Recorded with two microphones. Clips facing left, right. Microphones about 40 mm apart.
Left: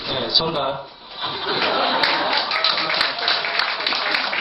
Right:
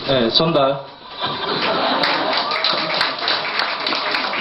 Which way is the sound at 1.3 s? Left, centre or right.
Centre.